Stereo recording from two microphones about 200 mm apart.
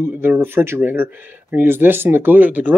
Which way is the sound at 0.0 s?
10° right (ahead or behind).